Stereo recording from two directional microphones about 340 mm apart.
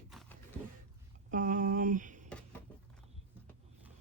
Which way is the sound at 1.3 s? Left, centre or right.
Right.